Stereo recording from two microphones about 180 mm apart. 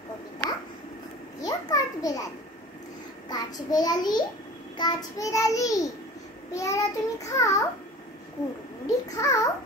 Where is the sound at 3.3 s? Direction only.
20° left (ahead or behind).